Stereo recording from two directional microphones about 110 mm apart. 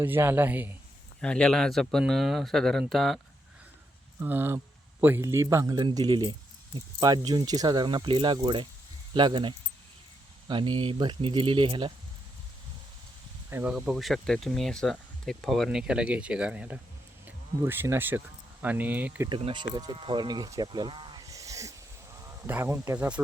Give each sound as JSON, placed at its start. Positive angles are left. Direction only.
{"t": 0.0, "sound": "speech", "side_deg": -20}
{"t": 1.2, "sound": "speech", "side_deg": 10}
{"t": 4.2, "sound": "speech", "side_deg": -20}
{"t": 5.7, "sound": "speech", "side_deg": -40}
{"t": 13.5, "sound": "speech", "side_deg": -10}
{"t": 15.8, "sound": "speech", "side_deg": -10}
{"t": 19.5, "sound": "speech", "side_deg": -40}
{"t": 21.2, "sound": "a sound", "side_deg": -30}
{"t": 22.4, "sound": "speech", "side_deg": -20}
{"t": 23.0, "sound": "speech", "side_deg": -10}